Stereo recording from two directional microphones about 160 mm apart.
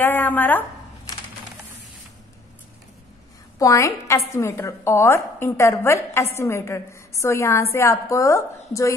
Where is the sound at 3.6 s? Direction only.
20° left (ahead or behind).